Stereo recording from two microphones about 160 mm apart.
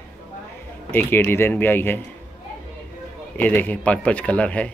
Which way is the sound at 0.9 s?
15° left (ahead or behind).